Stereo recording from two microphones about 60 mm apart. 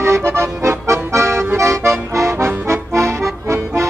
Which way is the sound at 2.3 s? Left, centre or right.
Right.